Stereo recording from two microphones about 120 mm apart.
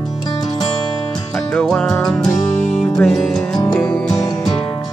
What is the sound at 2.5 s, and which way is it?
Music, 70° left (ahead or behind).